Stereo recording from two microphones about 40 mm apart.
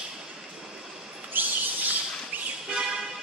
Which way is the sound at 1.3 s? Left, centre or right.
Right.